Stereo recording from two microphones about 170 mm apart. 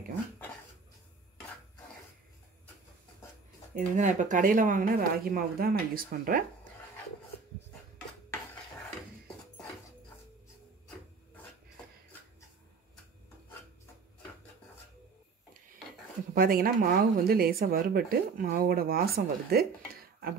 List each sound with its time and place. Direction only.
3.7 s speech: 45° right (ahead or behind)
16.3 s speech: 60° right (ahead or behind)